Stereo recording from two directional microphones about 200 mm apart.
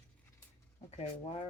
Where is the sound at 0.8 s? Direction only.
30° left (ahead or behind).